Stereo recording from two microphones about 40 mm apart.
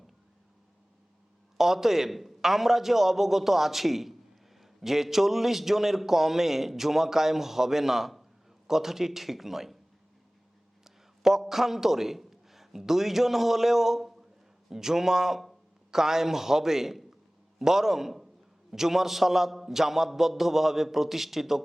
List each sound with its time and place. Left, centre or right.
1.5 s a man's voice: centre
10.8 s a man's voice: centre